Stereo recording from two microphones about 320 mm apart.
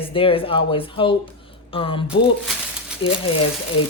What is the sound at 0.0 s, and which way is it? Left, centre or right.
A woman's voice, centre.